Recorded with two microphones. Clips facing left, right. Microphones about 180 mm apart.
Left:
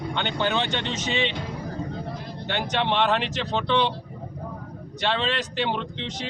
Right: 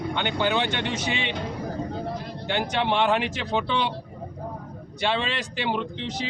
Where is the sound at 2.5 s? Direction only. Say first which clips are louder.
Right 1 dB; 10° right (ahead or behind).